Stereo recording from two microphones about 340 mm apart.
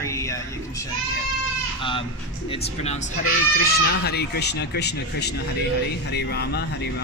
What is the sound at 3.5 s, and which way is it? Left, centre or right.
Speech, left.